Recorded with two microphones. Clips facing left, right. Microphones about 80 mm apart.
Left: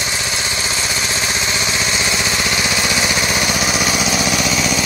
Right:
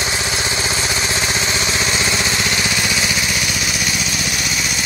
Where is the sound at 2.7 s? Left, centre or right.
Left.